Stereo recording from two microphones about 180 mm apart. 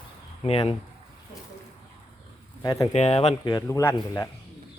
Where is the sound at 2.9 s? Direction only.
35° left (ahead or behind); by 4.3 s 15° left (ahead or behind).